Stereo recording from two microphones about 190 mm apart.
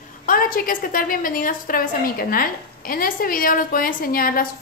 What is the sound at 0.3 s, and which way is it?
A woman's voice, 50° left (ahead or behind).